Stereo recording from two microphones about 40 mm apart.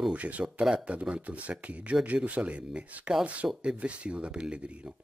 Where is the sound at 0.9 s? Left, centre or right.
Right.